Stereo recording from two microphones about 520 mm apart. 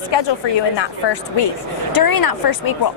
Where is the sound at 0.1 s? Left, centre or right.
Left.